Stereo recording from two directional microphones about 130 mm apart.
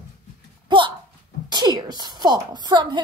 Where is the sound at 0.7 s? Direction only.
40° right (ahead or behind).